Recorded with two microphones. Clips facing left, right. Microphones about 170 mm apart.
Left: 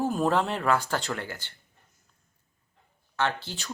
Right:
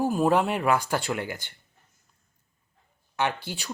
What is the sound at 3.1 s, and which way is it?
Speech, 15° right (ahead or behind).